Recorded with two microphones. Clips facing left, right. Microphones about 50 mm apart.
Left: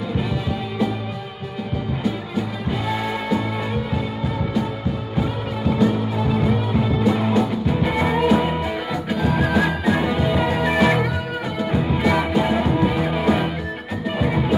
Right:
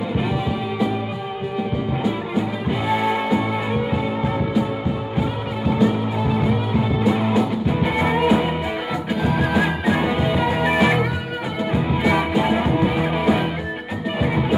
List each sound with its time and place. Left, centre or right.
2.9 s music: centre
5.7 s music: centre